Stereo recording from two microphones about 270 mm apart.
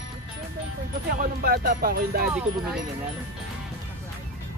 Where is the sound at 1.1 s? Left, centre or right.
Right.